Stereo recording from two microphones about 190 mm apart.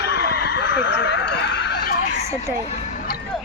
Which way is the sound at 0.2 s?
55° left (ahead or behind).